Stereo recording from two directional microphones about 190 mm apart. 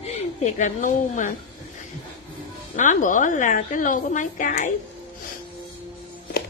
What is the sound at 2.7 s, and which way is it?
A woman's voice, 40° left (ahead or behind).